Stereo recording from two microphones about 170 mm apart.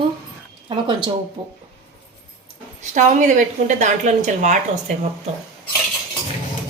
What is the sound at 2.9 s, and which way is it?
A woman's voice, 45° right (ahead or behind).